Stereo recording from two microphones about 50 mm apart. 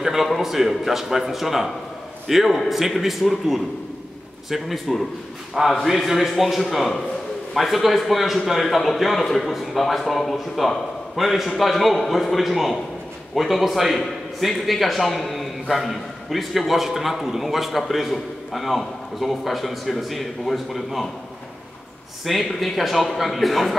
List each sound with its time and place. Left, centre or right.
0.0 s a man's voice: centre
22.2 s a man's voice: centre